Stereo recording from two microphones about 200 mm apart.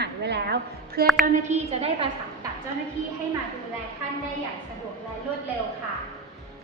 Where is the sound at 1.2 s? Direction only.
35° right (ahead or behind).